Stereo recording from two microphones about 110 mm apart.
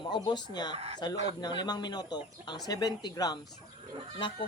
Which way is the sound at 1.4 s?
40° left (ahead or behind).